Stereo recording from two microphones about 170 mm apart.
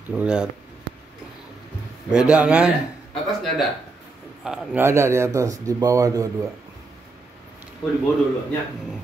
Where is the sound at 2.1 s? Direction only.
5° right (ahead or behind).